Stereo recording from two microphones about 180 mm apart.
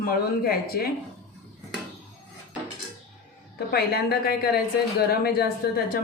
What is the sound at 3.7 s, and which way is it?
A woman's voice, 60° left (ahead or behind).